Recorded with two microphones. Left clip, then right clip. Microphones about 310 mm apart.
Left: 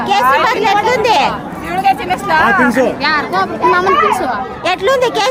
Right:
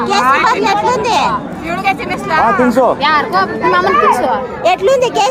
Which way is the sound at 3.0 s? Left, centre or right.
Centre.